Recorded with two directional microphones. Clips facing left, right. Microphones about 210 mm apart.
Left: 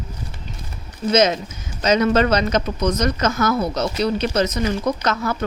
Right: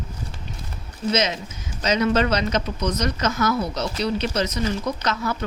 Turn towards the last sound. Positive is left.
turn(degrees=50)  # may be behind; listen again after turning